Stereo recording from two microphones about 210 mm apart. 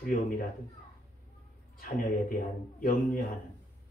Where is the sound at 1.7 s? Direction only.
40° left (ahead or behind).